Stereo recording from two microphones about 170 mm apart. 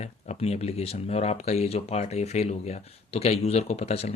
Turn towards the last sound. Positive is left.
turn(degrees=40)  # may be behind; listen again after turning